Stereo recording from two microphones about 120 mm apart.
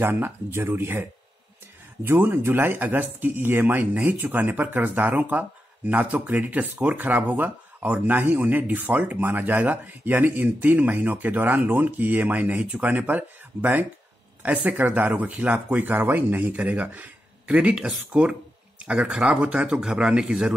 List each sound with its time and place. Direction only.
0.0 s speech: 20° right (ahead or behind)
2.0 s speech: 15° right (ahead or behind)